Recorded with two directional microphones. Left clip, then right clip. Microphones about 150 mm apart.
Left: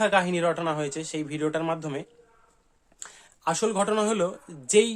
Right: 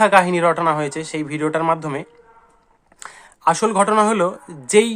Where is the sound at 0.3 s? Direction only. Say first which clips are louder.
Right 9 dB; centre (ahead or behind).